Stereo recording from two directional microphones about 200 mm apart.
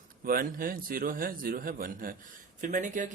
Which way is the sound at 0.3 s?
45° right (ahead or behind).